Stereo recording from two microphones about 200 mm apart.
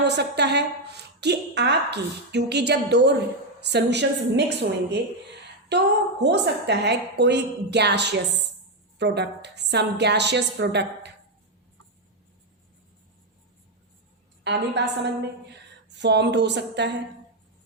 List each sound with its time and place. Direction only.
0.1 s a woman's voice: 55° right (ahead or behind)
6.2 s a woman's voice: 60° right (ahead or behind)
14.4 s a woman's voice: 60° right (ahead or behind)